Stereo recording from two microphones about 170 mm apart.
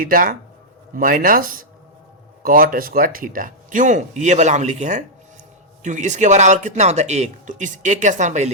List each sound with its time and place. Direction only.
0.0 s speech: 55° right (ahead or behind)